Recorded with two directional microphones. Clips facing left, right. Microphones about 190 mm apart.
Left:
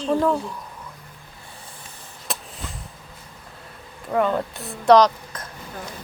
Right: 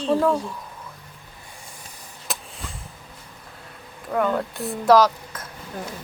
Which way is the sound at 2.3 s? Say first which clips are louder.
Left 1 dB; centre (ahead or behind).